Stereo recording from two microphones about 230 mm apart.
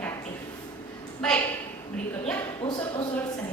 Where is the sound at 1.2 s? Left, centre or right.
Centre.